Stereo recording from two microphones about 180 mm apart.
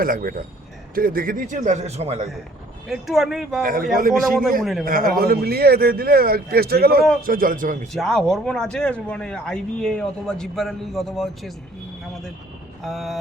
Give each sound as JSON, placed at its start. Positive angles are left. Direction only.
{"t": 0.0, "sound": "a man's voice", "side_deg": -50}
{"t": 2.9, "sound": "speech", "side_deg": 0}
{"t": 3.6, "sound": "a man's voice", "side_deg": -55}
{"t": 7.9, "sound": "speech", "side_deg": 0}
{"t": 12.8, "sound": "speech", "side_deg": 0}